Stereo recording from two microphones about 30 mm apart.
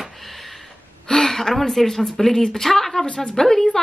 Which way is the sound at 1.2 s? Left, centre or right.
Centre.